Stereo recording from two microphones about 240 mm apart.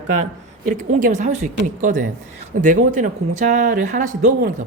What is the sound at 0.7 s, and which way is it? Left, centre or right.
Speech, right.